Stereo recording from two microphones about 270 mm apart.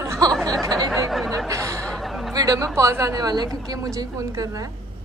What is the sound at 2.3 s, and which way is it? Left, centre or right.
A woman's voice, centre.